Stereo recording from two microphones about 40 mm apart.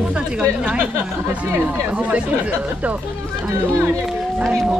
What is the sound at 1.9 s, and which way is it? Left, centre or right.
Speech, right.